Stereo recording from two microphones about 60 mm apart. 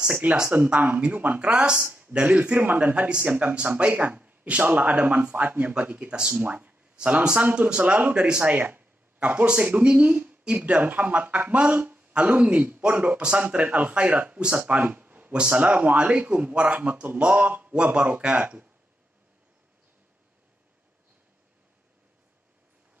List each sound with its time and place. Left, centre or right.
0.2 s speech: right
6.4 s speech: right
15.3 s speech: centre